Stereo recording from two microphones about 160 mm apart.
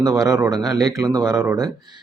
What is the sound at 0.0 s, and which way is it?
Speech, 20° right (ahead or behind).